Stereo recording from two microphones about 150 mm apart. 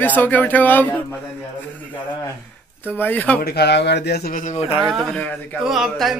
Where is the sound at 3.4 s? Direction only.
90° left.